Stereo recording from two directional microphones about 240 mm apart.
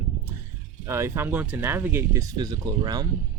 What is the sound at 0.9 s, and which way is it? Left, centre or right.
Speech, centre.